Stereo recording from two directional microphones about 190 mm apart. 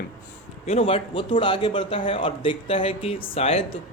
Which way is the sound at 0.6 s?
30° left (ahead or behind).